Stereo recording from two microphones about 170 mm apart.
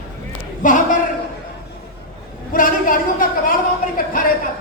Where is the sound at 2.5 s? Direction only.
55° left (ahead or behind).